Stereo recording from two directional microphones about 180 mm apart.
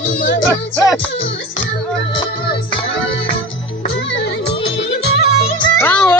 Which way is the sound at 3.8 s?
80° left.